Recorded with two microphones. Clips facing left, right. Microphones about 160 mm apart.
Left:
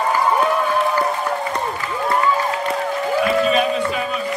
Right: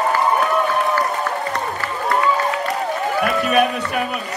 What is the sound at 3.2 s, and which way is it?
Music, 60° right (ahead or behind).